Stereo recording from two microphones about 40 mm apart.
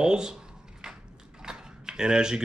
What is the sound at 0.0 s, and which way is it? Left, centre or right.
Speech, centre.